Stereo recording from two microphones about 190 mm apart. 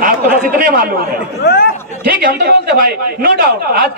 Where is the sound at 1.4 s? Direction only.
55° left (ahead or behind).